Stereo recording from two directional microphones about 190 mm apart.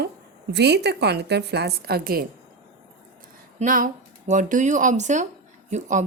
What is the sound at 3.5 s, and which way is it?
A woman's voice, 45° right (ahead or behind).